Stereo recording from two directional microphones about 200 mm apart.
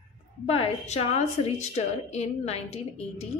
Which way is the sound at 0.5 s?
30° left (ahead or behind).